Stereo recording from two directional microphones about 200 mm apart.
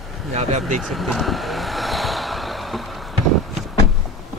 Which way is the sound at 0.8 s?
Centre (ahead or behind).